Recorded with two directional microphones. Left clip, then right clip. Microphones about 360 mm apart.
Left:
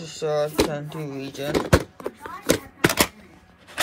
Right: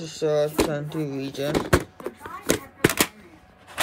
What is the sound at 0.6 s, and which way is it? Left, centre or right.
Door, centre.